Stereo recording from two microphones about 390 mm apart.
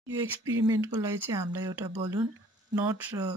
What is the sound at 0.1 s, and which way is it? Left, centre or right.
Speech, centre.